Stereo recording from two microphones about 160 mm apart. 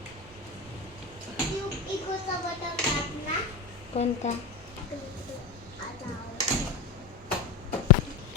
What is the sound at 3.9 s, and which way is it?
Speech, 40° left (ahead or behind).